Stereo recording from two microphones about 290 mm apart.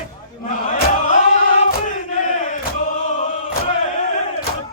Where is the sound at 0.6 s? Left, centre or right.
Left.